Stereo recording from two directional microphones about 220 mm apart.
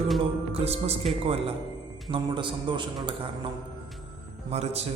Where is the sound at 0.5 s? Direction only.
30° right (ahead or behind).